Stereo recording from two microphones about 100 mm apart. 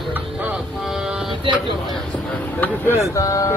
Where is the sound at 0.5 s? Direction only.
5° right (ahead or behind).